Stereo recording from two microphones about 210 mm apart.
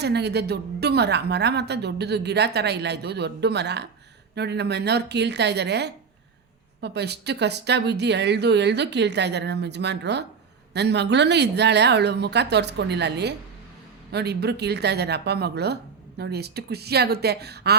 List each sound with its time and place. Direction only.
0.0 s a woman's voice: 50° right (ahead or behind)